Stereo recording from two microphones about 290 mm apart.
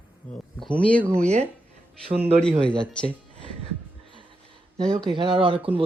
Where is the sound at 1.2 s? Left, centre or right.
Right.